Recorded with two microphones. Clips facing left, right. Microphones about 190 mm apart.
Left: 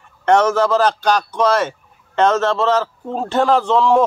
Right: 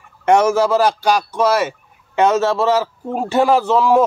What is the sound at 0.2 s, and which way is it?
Speech, 10° right (ahead or behind).